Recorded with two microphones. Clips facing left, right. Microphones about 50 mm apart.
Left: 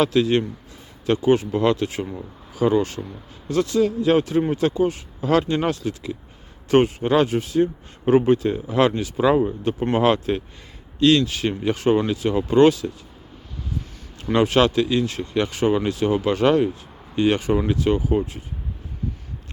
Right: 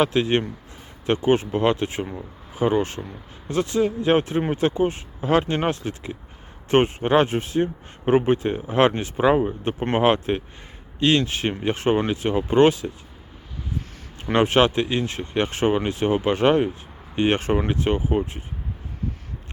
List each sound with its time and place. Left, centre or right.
0.0 s speech: right
14.3 s speech: right